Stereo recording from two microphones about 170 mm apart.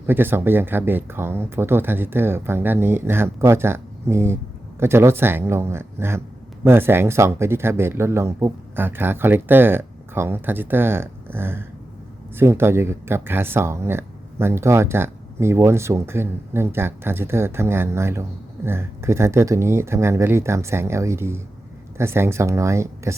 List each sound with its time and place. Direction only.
0.1 s speech: 10° right (ahead or behind)